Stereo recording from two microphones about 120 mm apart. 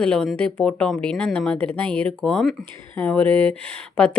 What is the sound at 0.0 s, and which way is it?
Speech, 5° left (ahead or behind).